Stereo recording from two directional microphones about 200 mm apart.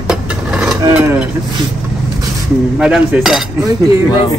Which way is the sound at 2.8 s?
5° right (ahead or behind).